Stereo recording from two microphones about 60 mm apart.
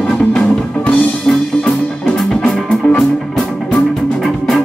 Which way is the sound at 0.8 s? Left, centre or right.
Centre.